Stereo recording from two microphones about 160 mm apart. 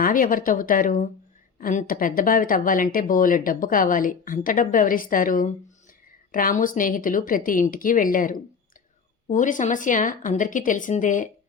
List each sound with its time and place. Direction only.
0.0 s speech: 60° left (ahead or behind)